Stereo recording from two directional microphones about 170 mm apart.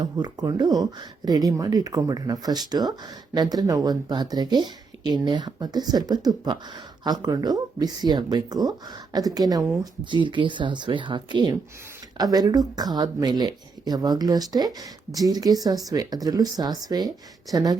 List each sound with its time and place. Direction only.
0.0 s speech: 25° right (ahead or behind)